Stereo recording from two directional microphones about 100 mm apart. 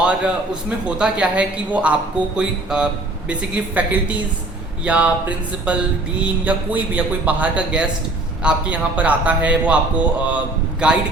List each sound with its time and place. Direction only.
0.9 s speech: 10° right (ahead or behind)